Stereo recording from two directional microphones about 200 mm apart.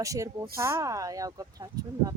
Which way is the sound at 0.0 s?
15° right (ahead or behind).